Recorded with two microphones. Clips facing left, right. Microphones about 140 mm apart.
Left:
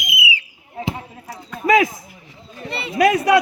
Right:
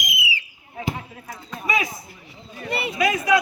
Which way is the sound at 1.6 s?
90° left.